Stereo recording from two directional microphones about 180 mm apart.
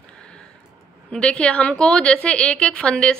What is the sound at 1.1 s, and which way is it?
A woman's voice, 5° left (ahead or behind).